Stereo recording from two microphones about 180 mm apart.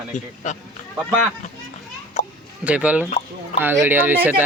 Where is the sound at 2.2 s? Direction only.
40° left (ahead or behind).